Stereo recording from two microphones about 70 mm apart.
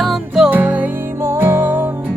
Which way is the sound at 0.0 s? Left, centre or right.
Centre.